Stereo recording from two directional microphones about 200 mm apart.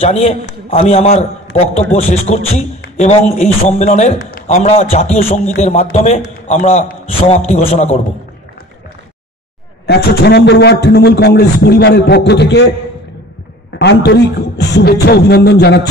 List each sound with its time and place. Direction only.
0.0 s a man's voice: 30° left (ahead or behind)
9.8 s a man's voice: 55° left (ahead or behind)
13.7 s a man's voice: 60° left (ahead or behind)